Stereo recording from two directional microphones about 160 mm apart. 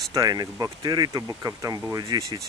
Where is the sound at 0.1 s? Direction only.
25° right (ahead or behind).